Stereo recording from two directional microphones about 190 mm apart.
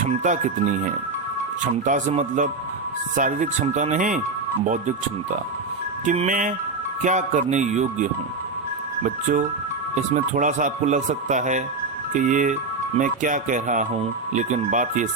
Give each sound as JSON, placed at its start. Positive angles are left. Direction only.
{"t": 0.2, "sound": "speech", "side_deg": -40}
{"t": 6.1, "sound": "speech", "side_deg": -45}
{"t": 9.9, "sound": "speech", "side_deg": -40}